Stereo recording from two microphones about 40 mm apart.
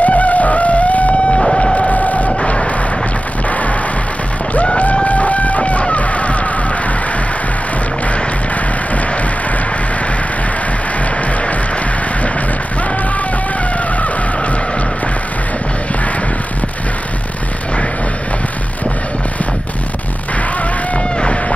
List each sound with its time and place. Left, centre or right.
0.0 s music: left
1.8 s printer: left
2.2 s vehicle: left
3.4 s music: left
4.7 s music: left
21.2 s a sound: left